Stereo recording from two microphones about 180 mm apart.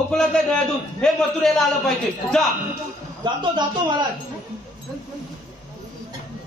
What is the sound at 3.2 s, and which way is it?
Speech, 25° right (ahead or behind).